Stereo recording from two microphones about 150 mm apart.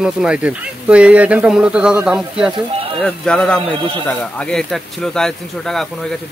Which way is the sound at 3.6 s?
35° right (ahead or behind).